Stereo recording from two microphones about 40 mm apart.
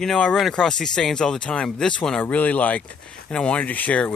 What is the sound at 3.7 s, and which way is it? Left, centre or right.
Speech, left.